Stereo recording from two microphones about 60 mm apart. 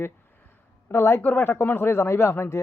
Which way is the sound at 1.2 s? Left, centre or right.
Left.